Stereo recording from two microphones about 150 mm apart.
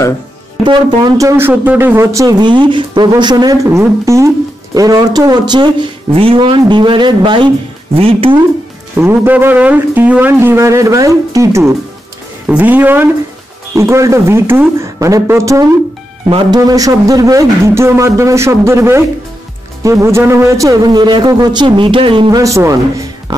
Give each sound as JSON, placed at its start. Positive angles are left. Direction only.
{"t": 0.7, "sound": "speech", "side_deg": -25}
{"t": 8.9, "sound": "speech", "side_deg": -15}
{"t": 16.3, "sound": "speech", "side_deg": -30}
{"t": 22.4, "sound": "speech", "side_deg": -20}